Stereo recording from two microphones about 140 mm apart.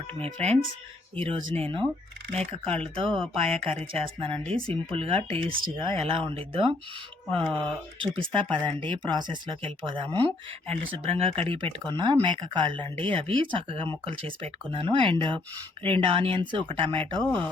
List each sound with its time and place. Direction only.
0.2 s speech: 50° right (ahead or behind)
10.1 s speech: 10° left (ahead or behind)
10.9 s speech: 45° right (ahead or behind)